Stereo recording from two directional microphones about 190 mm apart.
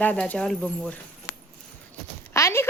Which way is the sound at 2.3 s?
15° left (ahead or behind).